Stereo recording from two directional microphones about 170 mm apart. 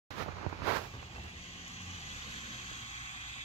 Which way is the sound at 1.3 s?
35° left (ahead or behind).